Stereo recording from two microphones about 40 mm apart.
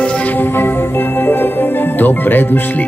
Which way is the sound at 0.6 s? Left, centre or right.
Left.